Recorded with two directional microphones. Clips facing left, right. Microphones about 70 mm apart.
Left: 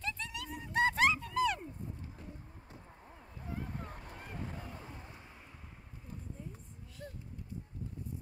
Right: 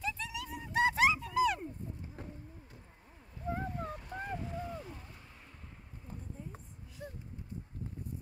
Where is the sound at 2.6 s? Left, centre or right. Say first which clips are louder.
Left 4 dB; left.